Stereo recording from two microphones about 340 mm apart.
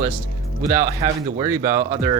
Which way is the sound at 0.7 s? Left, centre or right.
Centre.